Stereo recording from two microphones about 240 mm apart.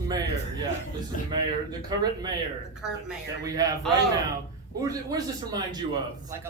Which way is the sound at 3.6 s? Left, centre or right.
Centre.